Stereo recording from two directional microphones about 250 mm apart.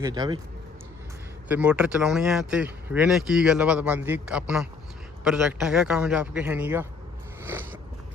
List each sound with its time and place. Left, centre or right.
0.0 s speech: centre
1.5 s speech: centre
7.4 s a sound: centre